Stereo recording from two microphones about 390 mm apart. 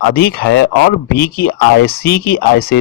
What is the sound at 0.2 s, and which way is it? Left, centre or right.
Speech, left.